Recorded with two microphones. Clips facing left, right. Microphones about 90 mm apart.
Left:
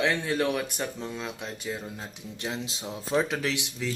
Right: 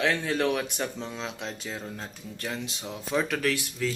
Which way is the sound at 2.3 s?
25° left (ahead or behind).